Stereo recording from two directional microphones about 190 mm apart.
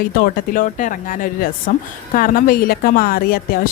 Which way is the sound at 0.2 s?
45° left (ahead or behind).